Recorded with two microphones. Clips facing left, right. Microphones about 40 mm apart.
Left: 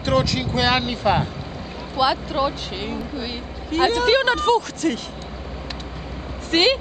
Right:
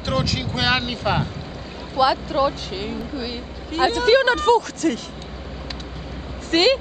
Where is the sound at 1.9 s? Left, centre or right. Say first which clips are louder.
Right 2 dB; left.